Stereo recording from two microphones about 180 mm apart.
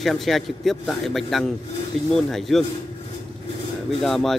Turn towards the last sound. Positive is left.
turn(degrees=0)  # may be behind; listen again after turning